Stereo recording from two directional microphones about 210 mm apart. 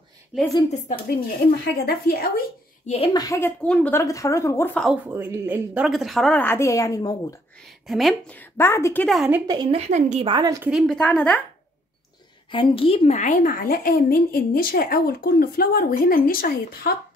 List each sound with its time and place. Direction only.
0.3 s a woman's voice: 5° right (ahead or behind)
0.8 s a woman's voice: 45° left (ahead or behind)
2.9 s a woman's voice: 25° left (ahead or behind); by 4.9 s 5° left (ahead or behind)
5.0 s a woman's voice: 10° right (ahead or behind); by 7.3 s 15° left (ahead or behind)
7.8 s a woman's voice: centre (ahead or behind)
9.5 s speech: 20° right (ahead or behind)
9.8 s a woman's voice: 35° right (ahead or behind)
10.3 s a woman's voice: 15° right (ahead or behind)
10.7 s a woman's voice: centre (ahead or behind)
12.4 s a woman's voice: 25° left (ahead or behind); by 16.9 s 45° left (ahead or behind)